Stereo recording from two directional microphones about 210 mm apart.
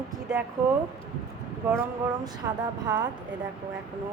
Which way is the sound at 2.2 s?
20° right (ahead or behind).